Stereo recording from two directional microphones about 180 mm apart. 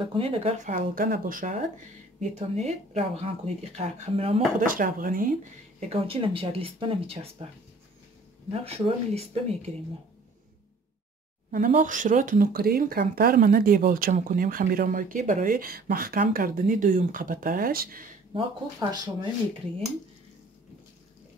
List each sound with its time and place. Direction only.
0.0 s speech: 30° right (ahead or behind)
4.6 s speech: 50° right (ahead or behind); by 7.4 s 30° right (ahead or behind)
8.6 s speech: 35° right (ahead or behind)
11.5 s speech: 45° right (ahead or behind)
18.3 s speech: 25° right (ahead or behind)